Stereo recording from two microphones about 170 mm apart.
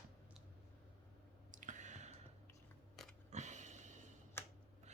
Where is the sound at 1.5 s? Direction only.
50° right (ahead or behind).